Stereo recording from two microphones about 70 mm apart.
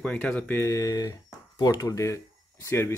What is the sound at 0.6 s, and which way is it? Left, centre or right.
Speech, left.